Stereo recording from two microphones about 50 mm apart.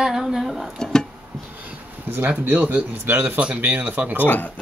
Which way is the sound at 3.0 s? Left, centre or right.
Right.